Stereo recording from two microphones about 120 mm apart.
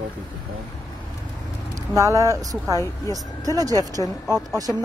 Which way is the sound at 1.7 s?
25° right (ahead or behind).